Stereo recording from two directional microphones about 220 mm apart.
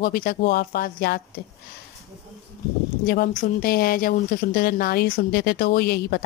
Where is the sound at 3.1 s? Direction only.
40° left (ahead or behind).